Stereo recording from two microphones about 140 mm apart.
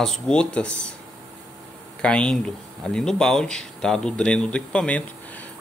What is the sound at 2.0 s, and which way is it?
Speech, 5° left (ahead or behind).